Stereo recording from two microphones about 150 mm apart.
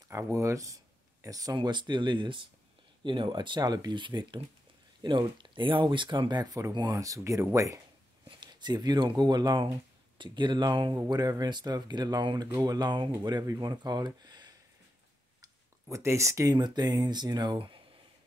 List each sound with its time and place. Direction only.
0.1 s speech: 20° right (ahead or behind)
15.4 s a sound: 20° right (ahead or behind)
16.5 s speech: 30° right (ahead or behind)